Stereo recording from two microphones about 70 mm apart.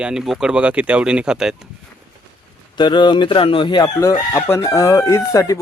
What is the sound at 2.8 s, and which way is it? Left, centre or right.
Speech, left.